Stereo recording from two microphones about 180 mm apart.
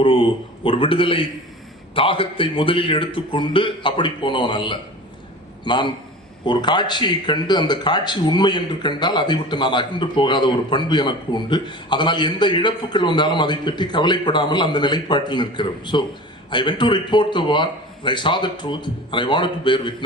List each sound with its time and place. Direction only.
0.0 s speech: 30° left (ahead or behind)